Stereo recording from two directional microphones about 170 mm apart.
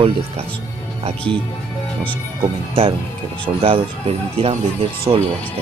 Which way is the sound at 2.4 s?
35° right (ahead or behind).